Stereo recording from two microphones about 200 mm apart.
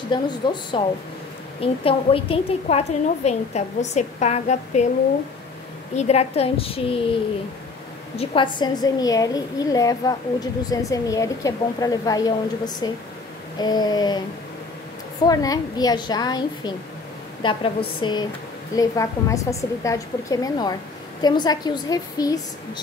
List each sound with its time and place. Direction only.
0.1 s a woman's voice: 25° left (ahead or behind)
5.9 s a woman's voice: 35° left (ahead or behind)
8.2 s a woman's voice: 25° left (ahead or behind)
15.2 s a woman's voice: 20° left (ahead or behind)